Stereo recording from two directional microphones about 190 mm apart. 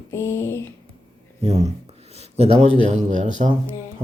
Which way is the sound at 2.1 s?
35° right (ahead or behind).